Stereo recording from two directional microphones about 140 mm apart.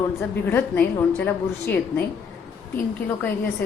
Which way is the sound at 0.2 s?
15° left (ahead or behind).